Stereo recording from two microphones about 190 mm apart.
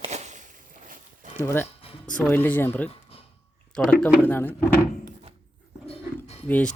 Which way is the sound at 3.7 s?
Centre (ahead or behind).